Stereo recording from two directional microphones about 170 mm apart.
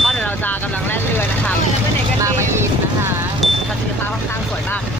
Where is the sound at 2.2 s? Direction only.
15° right (ahead or behind).